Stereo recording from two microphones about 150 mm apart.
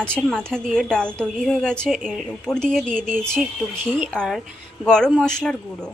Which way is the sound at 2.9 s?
65° right (ahead or behind).